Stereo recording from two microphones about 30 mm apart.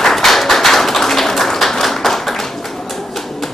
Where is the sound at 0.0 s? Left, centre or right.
Centre.